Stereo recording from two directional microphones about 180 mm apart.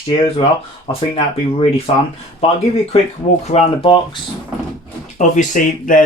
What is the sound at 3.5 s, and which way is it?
Speech, 35° left (ahead or behind).